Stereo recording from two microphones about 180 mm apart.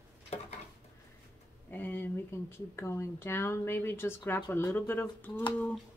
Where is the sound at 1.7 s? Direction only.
10° left (ahead or behind).